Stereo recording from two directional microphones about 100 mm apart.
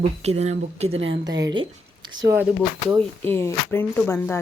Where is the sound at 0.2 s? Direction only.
90° right.